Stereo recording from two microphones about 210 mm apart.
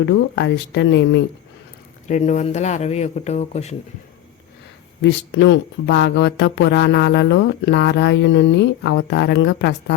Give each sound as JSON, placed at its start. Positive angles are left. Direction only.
{"t": 0.0, "sound": "speech", "side_deg": 55}
{"t": 2.0, "sound": "speech", "side_deg": 35}
{"t": 5.0, "sound": "speech", "side_deg": 55}